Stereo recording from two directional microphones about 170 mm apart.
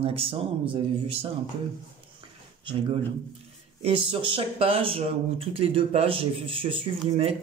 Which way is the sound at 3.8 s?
30° right (ahead or behind).